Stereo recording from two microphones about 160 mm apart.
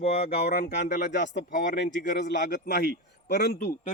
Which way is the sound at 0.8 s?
50° left (ahead or behind).